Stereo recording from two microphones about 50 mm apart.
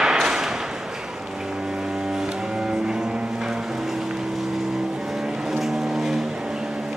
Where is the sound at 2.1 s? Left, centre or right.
Centre.